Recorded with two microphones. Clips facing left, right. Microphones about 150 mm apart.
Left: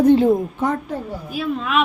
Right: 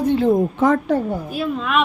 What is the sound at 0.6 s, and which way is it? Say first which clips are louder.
Speech: right 6 dB; 90° right.